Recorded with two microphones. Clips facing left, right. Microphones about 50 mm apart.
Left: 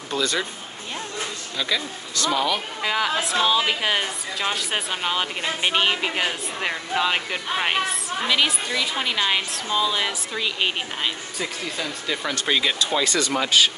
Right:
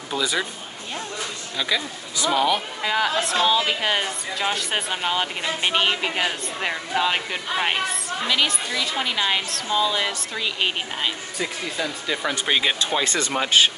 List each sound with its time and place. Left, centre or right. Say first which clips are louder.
0.1 s speech: even; centre
1.6 s speech: right 1 dB; centre
2.8 s speech: left 1 dB; centre
12.7 s speech: left 1 dB; right